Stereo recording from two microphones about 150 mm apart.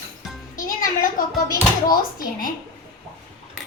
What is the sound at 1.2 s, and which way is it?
Speech, 65° left (ahead or behind).